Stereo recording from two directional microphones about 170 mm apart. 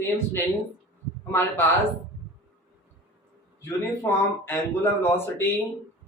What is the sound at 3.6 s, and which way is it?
Speech, 15° left (ahead or behind).